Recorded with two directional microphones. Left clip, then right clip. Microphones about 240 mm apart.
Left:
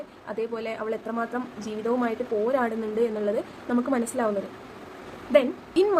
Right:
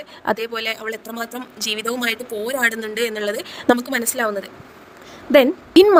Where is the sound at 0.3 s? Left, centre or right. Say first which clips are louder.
Right 8 dB; right.